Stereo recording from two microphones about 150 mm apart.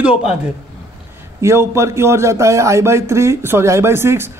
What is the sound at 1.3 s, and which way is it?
Speech, 20° right (ahead or behind).